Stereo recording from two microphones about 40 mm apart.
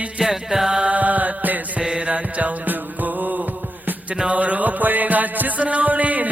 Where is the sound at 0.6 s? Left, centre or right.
Centre.